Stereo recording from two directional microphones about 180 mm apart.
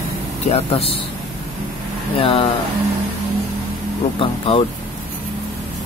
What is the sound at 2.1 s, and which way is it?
Speech, 30° left (ahead or behind).